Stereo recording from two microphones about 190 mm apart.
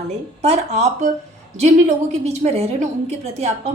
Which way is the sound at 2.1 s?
35° right (ahead or behind).